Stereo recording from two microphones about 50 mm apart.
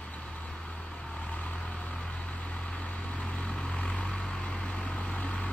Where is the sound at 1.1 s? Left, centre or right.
Left.